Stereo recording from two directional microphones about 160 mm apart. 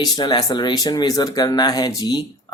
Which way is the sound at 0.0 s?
25° left (ahead or behind).